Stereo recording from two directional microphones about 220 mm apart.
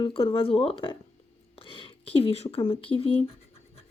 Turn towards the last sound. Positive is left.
turn(degrees=25)  # may be behind; listen again after turning